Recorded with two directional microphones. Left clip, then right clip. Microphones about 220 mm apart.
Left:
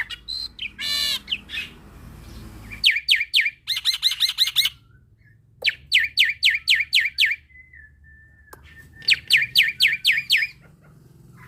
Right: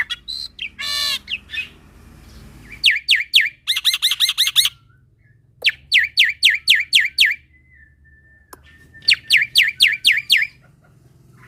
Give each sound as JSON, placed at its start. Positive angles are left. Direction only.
{"t": 0.0, "sound": "bird", "side_deg": -25}
{"t": 2.8, "sound": "squawk", "side_deg": -25}
{"t": 5.5, "sound": "bird", "side_deg": -20}
{"t": 8.5, "sound": "bird", "side_deg": -20}
{"t": 9.6, "sound": "a sound", "side_deg": -25}